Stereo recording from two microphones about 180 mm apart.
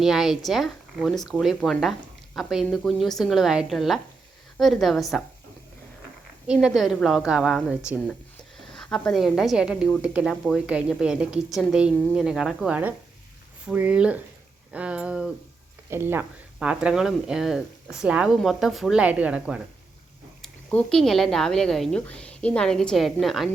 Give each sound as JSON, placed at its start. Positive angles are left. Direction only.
{"t": 0.0, "sound": "a woman's voice", "side_deg": 0}
{"t": 6.5, "sound": "a woman's voice", "side_deg": -5}
{"t": 20.4, "sound": "a woman's voice", "side_deg": 5}